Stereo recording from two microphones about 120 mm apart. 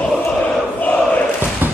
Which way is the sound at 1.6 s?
15° right (ahead or behind).